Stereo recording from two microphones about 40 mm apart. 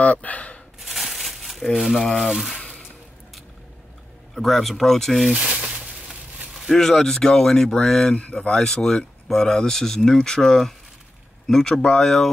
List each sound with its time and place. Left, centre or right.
0.0 s speech: left
0.7 s crumpling: centre
2.2 s speech: centre
4.4 s speech: centre
5.3 s speech: right
6.7 s speech: centre
8.1 s speech: left
8.4 s speech: centre